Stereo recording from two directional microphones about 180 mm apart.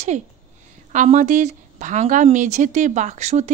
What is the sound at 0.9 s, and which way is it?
Speech, 40° right (ahead or behind).